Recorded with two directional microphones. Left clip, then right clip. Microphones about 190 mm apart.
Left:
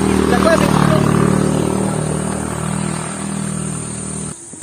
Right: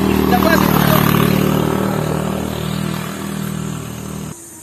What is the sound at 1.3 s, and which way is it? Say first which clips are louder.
Vehicle: right 1 dB; centre (ahead or behind).